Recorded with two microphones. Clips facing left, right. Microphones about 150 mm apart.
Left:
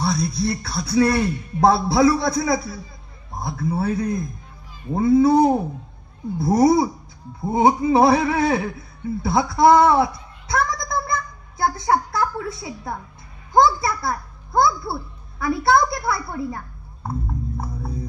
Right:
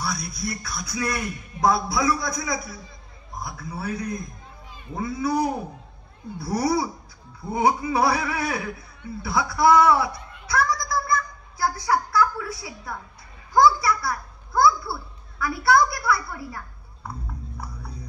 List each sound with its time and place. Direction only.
0.0 s a man's voice: 25° left (ahead or behind)
17.6 s hum: 50° left (ahead or behind)